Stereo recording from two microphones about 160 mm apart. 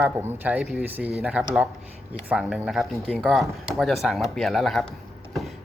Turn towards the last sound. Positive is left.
turn(degrees=0)  # may be behind; listen again after turning